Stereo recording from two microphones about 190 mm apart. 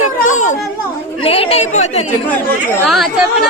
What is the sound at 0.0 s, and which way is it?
Children playing, 40° left (ahead or behind).